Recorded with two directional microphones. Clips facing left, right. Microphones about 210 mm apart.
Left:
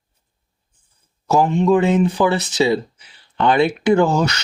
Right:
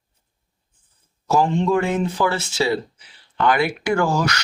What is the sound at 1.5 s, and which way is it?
Speech, 20° left (ahead or behind).